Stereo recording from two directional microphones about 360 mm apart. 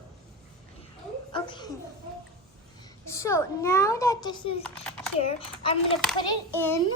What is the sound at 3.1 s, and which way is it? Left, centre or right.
Speech, centre.